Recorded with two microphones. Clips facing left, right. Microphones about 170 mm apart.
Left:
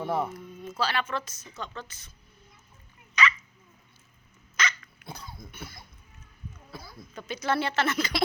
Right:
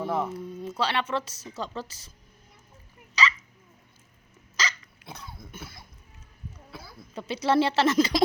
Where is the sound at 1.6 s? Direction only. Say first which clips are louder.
Right 4 dB; 35° right (ahead or behind).